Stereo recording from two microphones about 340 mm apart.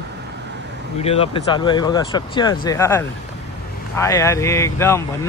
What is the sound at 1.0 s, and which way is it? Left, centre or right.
Speech, centre.